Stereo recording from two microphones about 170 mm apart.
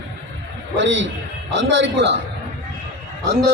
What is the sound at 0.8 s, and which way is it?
A man's voice, 90° right.